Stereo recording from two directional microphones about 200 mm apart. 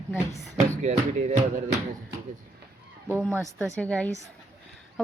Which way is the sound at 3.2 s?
10° left (ahead or behind).